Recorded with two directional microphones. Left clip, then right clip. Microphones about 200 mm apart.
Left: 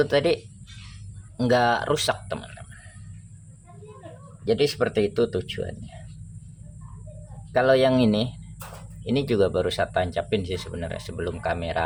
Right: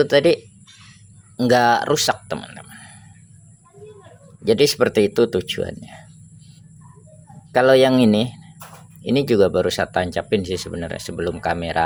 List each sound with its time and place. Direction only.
0.0 s speech: 30° right (ahead or behind)
1.4 s speech: 30° right (ahead or behind)
4.4 s speech: 45° right (ahead or behind)
7.5 s speech: 40° right (ahead or behind)